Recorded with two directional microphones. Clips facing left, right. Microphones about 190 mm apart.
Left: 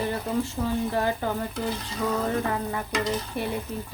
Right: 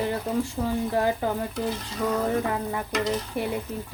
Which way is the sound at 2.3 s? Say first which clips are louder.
Right 1 dB; 15° right (ahead or behind).